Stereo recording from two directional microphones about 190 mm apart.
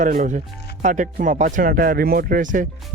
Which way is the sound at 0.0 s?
45° right (ahead or behind).